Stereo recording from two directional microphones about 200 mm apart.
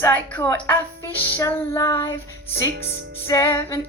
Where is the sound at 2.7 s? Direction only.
60° right (ahead or behind).